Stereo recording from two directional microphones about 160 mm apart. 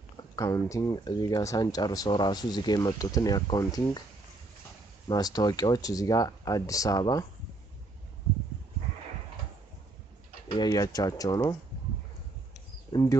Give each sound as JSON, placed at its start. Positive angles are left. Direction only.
{"t": 0.4, "sound": "speech", "side_deg": 20}
{"t": 5.0, "sound": "speech", "side_deg": 25}
{"t": 10.5, "sound": "speech", "side_deg": 25}
{"t": 12.9, "sound": "speech", "side_deg": 20}